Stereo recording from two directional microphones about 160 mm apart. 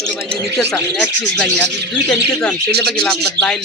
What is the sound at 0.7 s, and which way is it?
Speech, 5° left (ahead or behind).